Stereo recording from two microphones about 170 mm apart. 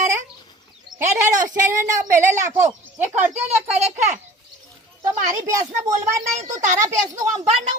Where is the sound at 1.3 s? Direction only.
50° right (ahead or behind).